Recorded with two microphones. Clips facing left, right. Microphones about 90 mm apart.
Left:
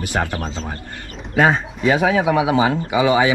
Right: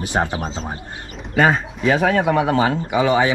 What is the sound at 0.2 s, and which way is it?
Speech, 35° right (ahead or behind).